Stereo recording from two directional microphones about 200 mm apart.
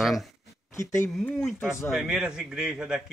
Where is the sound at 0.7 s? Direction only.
15° left (ahead or behind).